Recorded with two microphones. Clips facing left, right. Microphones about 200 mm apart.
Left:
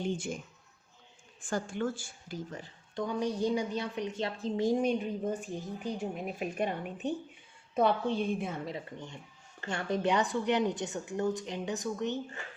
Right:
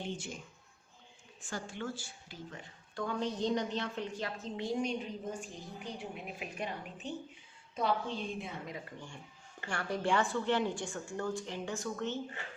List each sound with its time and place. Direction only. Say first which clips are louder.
1.4 s a woman's voice: left 7 dB; 50° left (ahead or behind)
2.9 s a woman's voice: left 3 dB; 15° left (ahead or behind); by 5.4 s 55° left (ahead or behind)
5.8 s a woman's voice: left 6 dB; 45° left (ahead or behind)
8.6 s a woman's voice: left 5 dB; 25° left (ahead or behind)